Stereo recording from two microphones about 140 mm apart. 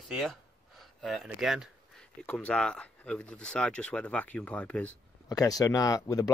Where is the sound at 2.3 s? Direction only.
10° left (ahead or behind).